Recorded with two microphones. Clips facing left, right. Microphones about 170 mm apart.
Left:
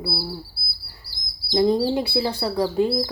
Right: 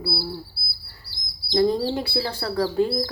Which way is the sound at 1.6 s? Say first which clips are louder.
Left 2 dB; 20° left (ahead or behind).